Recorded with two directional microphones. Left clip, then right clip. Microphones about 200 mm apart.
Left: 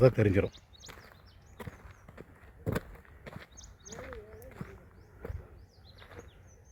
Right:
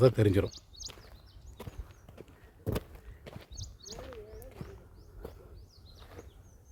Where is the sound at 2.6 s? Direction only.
20° left (ahead or behind).